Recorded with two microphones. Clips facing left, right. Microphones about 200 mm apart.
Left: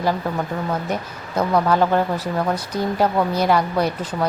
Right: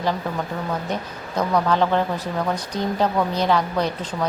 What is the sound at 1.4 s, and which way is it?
A woman's voice, 10° left (ahead or behind).